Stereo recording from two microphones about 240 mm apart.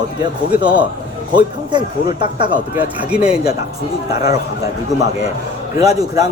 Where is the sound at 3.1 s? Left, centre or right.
Centre.